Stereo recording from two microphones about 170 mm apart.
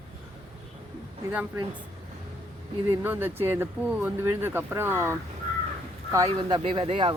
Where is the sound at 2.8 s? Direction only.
10° right (ahead or behind).